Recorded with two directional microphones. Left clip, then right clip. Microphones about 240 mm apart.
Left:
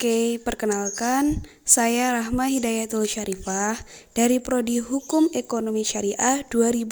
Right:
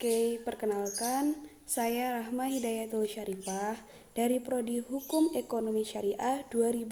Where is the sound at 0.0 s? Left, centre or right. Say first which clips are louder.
Left 7 dB; left.